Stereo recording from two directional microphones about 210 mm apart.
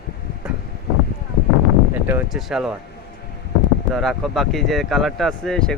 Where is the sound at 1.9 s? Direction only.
10° right (ahead or behind).